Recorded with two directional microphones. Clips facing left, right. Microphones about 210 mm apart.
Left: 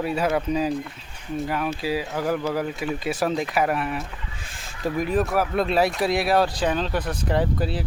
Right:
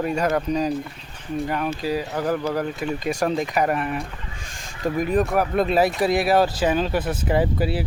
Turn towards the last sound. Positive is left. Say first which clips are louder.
# right 2 dB
turn(degrees=-5)  # may be behind; listen again after turning